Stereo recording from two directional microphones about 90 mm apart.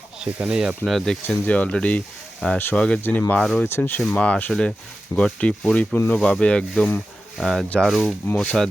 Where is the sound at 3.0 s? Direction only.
25° left (ahead or behind).